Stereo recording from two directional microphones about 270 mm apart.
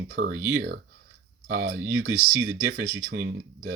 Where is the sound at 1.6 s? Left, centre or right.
Right.